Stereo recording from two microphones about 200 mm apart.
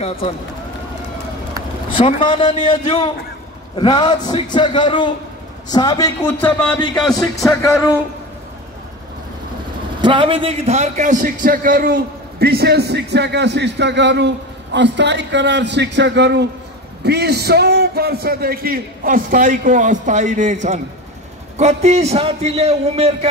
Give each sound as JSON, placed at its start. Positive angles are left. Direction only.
{"t": 1.9, "sound": "a man's voice", "side_deg": 25}
{"t": 10.0, "sound": "a man's voice", "side_deg": -25}